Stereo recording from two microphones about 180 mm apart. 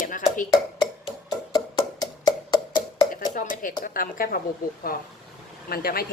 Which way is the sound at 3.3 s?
50° left (ahead or behind).